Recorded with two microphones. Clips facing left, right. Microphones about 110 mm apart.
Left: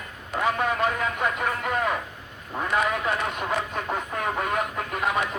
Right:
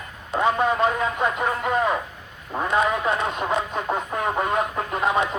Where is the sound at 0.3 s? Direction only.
25° right (ahead or behind).